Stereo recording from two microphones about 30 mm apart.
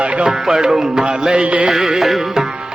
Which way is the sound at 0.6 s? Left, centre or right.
Right.